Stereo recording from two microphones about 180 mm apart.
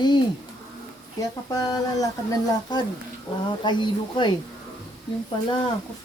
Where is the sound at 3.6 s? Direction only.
25° left (ahead or behind).